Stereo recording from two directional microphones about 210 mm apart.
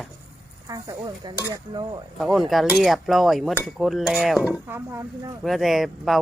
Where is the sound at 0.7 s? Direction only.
20° right (ahead or behind).